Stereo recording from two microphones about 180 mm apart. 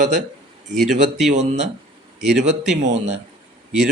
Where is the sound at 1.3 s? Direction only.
40° right (ahead or behind).